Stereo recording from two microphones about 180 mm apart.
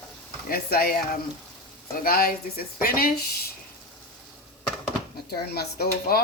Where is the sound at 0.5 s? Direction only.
55° left (ahead or behind).